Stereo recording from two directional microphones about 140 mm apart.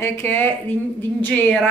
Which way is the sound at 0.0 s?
15° left (ahead or behind).